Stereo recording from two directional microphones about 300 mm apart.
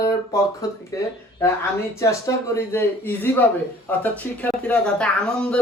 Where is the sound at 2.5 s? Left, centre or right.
Centre.